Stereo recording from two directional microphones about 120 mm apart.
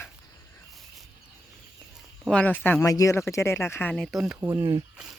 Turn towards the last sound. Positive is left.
turn(degrees=-30)  # may be behind; listen again after turning